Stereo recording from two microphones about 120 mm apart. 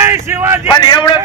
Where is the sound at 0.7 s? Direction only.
35° left (ahead or behind).